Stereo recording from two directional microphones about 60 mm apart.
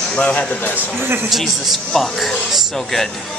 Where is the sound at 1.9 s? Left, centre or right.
Centre.